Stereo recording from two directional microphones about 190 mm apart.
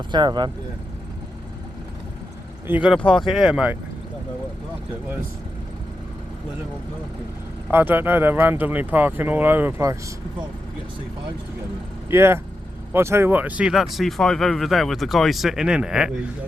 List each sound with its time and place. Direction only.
0.1 s speech: 25° right (ahead or behind)
2.6 s speech: 5° right (ahead or behind)
7.7 s speech: 10° right (ahead or behind)
12.1 s speech: 15° right (ahead or behind)